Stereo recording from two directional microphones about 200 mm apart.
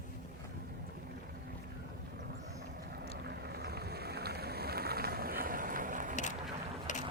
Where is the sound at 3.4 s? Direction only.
50° right (ahead or behind).